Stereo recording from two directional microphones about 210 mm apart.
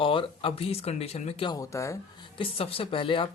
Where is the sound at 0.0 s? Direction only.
25° left (ahead or behind).